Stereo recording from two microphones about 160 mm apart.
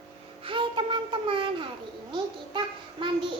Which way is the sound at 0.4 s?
30° right (ahead or behind).